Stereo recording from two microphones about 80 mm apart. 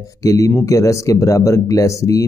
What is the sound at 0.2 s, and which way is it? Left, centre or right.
Speech, left.